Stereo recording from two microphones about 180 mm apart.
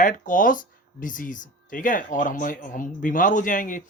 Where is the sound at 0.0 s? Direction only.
45° left (ahead or behind).